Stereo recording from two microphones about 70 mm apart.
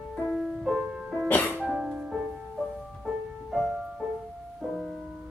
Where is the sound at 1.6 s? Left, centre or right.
Centre.